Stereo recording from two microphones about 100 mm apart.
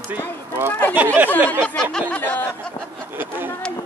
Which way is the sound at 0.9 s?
20° right (ahead or behind).